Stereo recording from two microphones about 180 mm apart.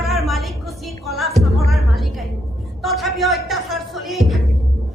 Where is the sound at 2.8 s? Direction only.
Centre (ahead or behind).